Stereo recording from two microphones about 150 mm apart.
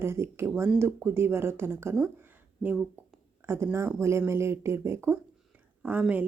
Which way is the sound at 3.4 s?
15° right (ahead or behind).